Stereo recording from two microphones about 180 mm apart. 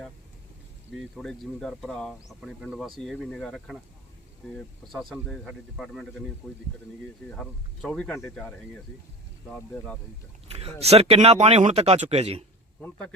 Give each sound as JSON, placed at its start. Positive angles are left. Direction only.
{"t": 0.9, "sound": "speech", "side_deg": 0}
{"t": 7.3, "sound": "speech", "side_deg": 5}
{"t": 9.7, "sound": "a man's voice", "side_deg": 15}
{"t": 10.5, "sound": "speech", "side_deg": -35}
{"t": 12.8, "sound": "a man's voice", "side_deg": 5}